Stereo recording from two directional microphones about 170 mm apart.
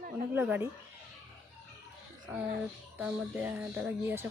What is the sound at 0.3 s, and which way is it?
Speech, 10° right (ahead or behind).